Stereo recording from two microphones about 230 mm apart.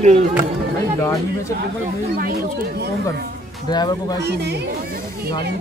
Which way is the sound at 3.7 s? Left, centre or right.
Centre.